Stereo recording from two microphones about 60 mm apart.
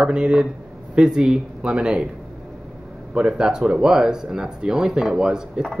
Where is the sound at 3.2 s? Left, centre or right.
Centre.